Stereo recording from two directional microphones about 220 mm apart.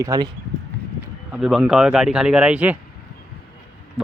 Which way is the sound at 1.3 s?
Centre (ahead or behind).